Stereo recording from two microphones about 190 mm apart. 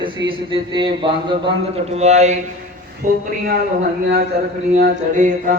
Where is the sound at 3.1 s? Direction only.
45° right (ahead or behind).